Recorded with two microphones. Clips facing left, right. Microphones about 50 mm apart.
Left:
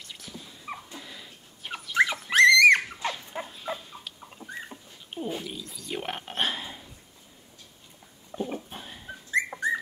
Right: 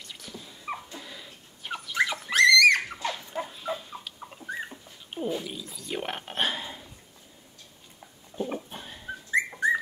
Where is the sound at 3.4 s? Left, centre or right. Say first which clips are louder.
Right 2 dB; centre.